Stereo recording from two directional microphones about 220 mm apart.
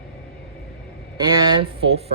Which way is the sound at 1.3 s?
20° right (ahead or behind).